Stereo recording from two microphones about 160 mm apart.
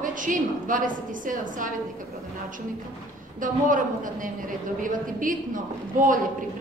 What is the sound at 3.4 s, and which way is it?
A woman's voice, 55° right (ahead or behind).